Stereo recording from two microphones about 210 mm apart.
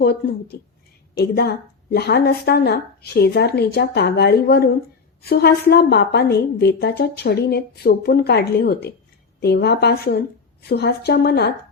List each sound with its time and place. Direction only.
0.0 s a woman's voice: 50° left (ahead or behind)